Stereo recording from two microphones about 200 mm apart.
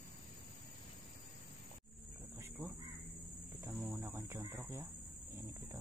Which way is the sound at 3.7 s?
Centre (ahead or behind).